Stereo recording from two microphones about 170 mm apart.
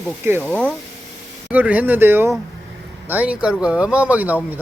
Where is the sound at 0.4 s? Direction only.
5° left (ahead or behind).